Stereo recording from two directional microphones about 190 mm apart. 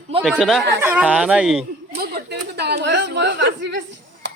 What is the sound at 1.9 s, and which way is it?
Speech, 55° right (ahead or behind).